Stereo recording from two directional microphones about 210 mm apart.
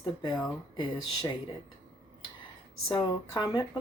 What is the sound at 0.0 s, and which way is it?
Speech, 20° left (ahead or behind).